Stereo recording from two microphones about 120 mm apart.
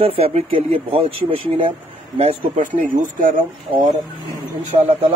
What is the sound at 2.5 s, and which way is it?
Speech, 90° right.